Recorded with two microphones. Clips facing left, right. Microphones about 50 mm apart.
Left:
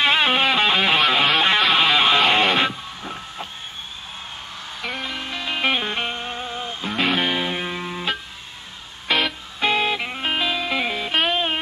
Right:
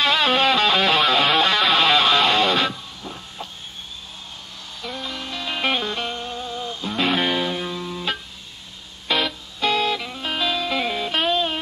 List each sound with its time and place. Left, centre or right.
0.0 s music: left
4.9 s music: left
5.8 s music: left
7.0 s music: centre
7.4 s music: left
9.1 s music: centre
9.6 s music: left
10.4 s music: centre
11.2 s music: left